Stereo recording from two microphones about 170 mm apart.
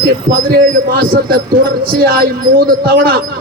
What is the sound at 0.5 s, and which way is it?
A man's voice, 65° right (ahead or behind).